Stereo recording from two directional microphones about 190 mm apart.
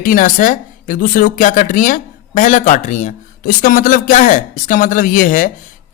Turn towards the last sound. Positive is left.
turn(degrees=45)  # may be behind; listen again after turning